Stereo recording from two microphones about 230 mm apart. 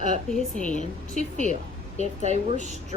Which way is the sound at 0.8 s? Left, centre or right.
Left.